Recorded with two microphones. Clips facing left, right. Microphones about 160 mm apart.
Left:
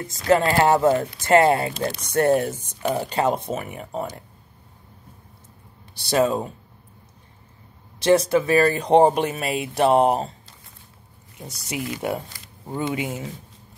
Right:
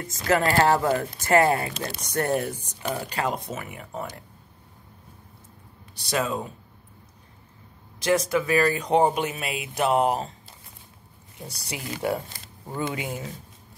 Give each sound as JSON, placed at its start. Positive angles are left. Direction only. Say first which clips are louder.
{"t": 0.3, "sound": "speech", "louder": "left 3 dB", "side_deg": 25}
{"t": 5.9, "sound": "speech", "louder": "left 7 dB", "side_deg": 30}
{"t": 8.0, "sound": "speech", "louder": "left 5 dB", "side_deg": 30}
{"t": 11.4, "sound": "speech", "louder": "left 5 dB", "side_deg": 20}